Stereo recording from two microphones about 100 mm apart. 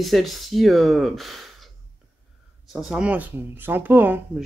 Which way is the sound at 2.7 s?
5° right (ahead or behind).